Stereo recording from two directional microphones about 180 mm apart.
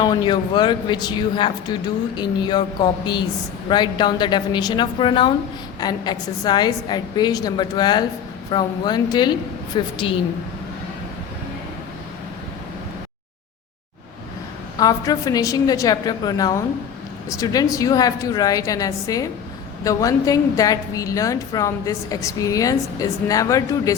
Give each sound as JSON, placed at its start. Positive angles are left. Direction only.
{"t": 0.0, "sound": "a woman's voice", "side_deg": 25}
{"t": 14.8, "sound": "a woman's voice", "side_deg": 20}